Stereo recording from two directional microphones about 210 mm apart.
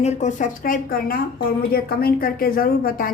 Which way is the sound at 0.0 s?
35° left (ahead or behind).